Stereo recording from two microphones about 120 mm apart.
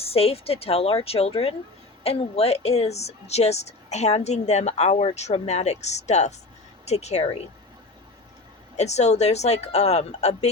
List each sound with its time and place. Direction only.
0.0 s a woman's voice: 55° left (ahead or behind)
8.7 s a woman's voice: 70° left (ahead or behind)